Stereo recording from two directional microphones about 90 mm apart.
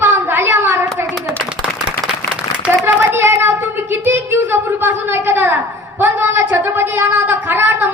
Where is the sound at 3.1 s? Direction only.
30° right (ahead or behind).